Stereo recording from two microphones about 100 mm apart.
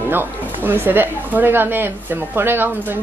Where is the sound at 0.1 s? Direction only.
20° right (ahead or behind).